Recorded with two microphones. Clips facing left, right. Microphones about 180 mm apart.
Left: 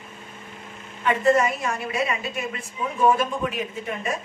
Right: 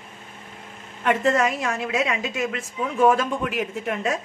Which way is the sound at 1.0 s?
90° right.